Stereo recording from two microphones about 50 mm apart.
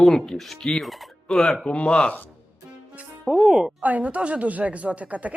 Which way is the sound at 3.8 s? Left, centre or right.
Right.